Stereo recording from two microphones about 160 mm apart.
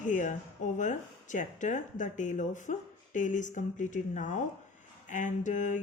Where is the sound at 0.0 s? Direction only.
50° left (ahead or behind).